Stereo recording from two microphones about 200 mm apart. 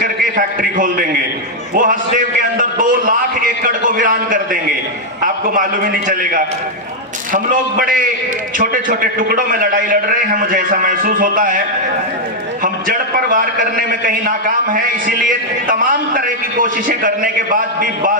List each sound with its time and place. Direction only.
0.0 s a sound: 45° right (ahead or behind)
5.2 s a man's voice: 45° right (ahead or behind)
12.6 s a man's voice: 45° right (ahead or behind)